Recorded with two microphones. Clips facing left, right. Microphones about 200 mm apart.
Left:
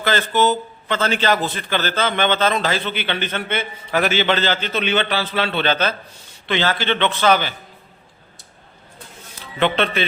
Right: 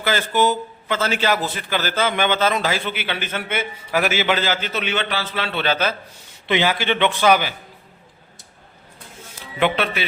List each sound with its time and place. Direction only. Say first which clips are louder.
0.0 s a man's voice: left 1 dB; 10° right (ahead or behind)
9.6 s a man's voice: left 1 dB; 10° right (ahead or behind)